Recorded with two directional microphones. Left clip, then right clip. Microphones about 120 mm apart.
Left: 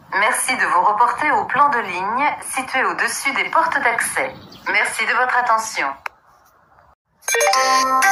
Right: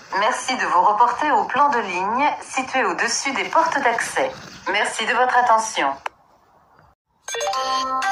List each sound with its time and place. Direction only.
0.1 s a woman's voice: 15° right (ahead or behind)
7.3 s music: 45° left (ahead or behind)